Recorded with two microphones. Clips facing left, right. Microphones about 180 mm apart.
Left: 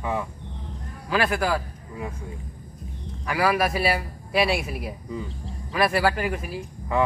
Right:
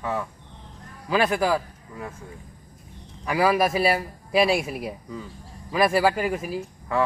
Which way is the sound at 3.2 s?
Centre (ahead or behind).